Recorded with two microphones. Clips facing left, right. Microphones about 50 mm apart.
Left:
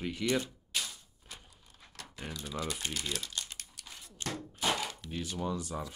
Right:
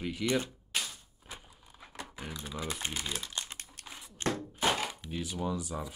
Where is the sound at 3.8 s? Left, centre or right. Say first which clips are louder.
Right 5 dB; centre.